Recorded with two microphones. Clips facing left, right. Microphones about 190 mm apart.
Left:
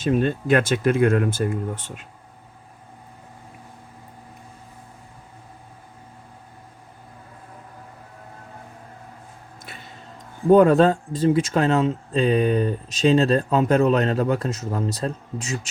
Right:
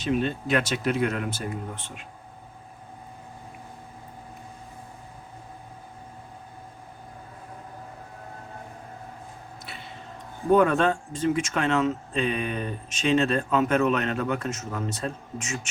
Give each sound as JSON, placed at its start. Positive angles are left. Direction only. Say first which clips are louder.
{"t": 0.0, "sound": "speech", "louder": "left 5 dB", "side_deg": 50}
{"t": 10.5, "sound": "speech", "louder": "left 6 dB", "side_deg": 35}